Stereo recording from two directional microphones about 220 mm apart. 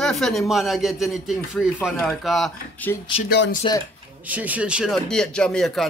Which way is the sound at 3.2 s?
45° left (ahead or behind).